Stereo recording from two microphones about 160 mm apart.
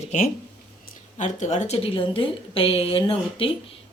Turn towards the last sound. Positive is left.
turn(degrees=35)  # may be behind; listen again after turning